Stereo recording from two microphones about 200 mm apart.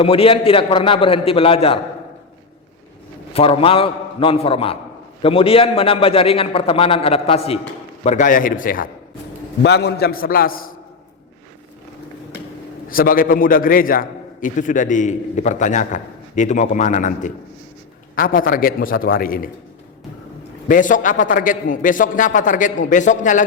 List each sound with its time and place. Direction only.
0.0 s a man's voice: 30° left (ahead or behind)
3.3 s a man's voice: 30° left (ahead or behind); by 8.9 s 45° left (ahead or behind)
9.6 s a man's voice: 55° left (ahead or behind)
12.9 s a man's voice: 45° left (ahead or behind)
20.7 s a man's voice: 40° left (ahead or behind)